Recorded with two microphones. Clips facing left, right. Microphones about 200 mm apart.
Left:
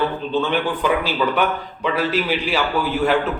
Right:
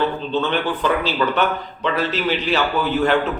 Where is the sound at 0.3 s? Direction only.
10° left (ahead or behind).